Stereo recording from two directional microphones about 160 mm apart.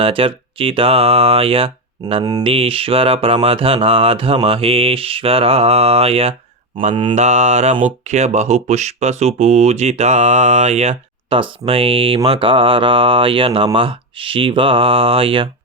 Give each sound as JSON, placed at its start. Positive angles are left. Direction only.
{"t": 0.0, "sound": "speech", "side_deg": -35}